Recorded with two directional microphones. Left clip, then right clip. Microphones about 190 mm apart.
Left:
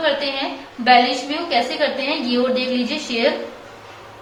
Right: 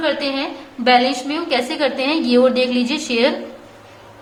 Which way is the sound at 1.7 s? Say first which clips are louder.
Right 2 dB; 35° right (ahead or behind).